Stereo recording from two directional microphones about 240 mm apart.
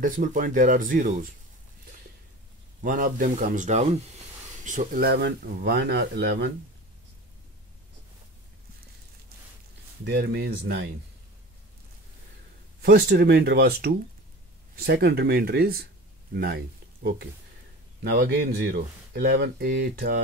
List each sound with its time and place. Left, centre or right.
0.0 s speech: right
2.8 s speech: right
10.0 s speech: right
12.8 s speech: right